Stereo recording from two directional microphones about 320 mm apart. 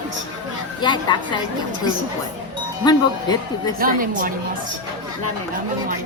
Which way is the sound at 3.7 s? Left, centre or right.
Right.